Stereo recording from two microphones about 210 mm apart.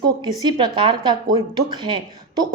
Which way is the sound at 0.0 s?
20° right (ahead or behind).